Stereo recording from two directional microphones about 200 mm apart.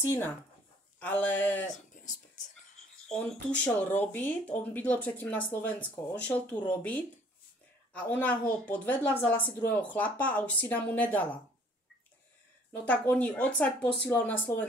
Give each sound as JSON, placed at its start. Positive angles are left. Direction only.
{"t": 0.0, "sound": "speech", "side_deg": 10}
{"t": 2.0, "sound": "whispering", "side_deg": 40}
{"t": 3.1, "sound": "speech", "side_deg": 5}
{"t": 12.8, "sound": "speech", "side_deg": 10}